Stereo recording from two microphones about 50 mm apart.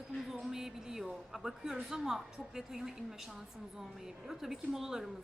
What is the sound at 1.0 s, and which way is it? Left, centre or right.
Speech, centre.